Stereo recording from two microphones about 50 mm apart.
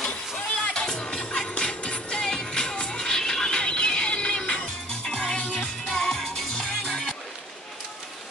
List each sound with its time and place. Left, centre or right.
0.7 s music: centre